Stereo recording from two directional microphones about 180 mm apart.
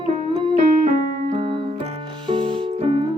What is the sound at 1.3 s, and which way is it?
Keyboard, 30° right (ahead or behind).